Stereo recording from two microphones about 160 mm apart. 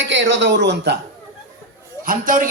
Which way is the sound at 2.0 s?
60° right (ahead or behind).